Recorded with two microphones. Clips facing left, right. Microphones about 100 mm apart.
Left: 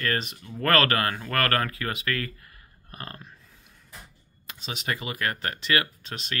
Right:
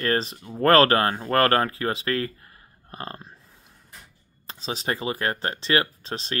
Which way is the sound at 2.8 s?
30° right (ahead or behind).